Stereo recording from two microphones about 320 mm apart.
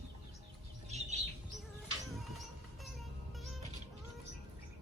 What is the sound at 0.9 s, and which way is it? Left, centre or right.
Bird, right.